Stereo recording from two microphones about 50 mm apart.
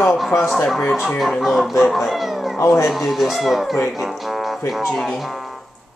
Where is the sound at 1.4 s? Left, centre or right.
Centre.